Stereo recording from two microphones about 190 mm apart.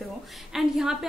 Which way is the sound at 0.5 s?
Centre (ahead or behind).